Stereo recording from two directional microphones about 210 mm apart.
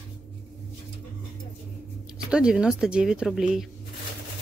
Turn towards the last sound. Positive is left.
turn(degrees=0)  # may be behind; listen again after turning